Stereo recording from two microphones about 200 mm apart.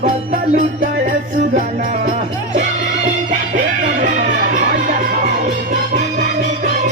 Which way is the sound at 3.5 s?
40° right (ahead or behind).